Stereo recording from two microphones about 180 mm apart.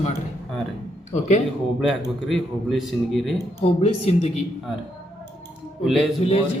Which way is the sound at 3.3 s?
35° left (ahead or behind).